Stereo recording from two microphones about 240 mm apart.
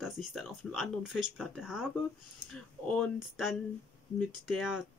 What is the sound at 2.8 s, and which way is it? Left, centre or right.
Speech, centre.